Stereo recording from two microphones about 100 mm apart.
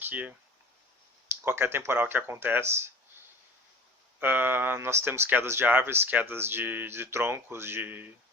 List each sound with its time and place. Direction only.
0.0 s speech: 15° right (ahead or behind)
1.5 s speech: 25° right (ahead or behind)
4.2 s speech: 20° right (ahead or behind)